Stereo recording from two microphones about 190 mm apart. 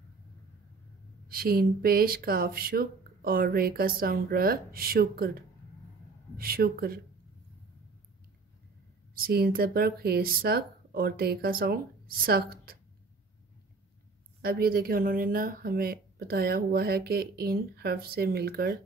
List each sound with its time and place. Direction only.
1.3 s speech: 50° right (ahead or behind)
9.1 s speech: 50° right (ahead or behind)
14.4 s speech: 50° right (ahead or behind)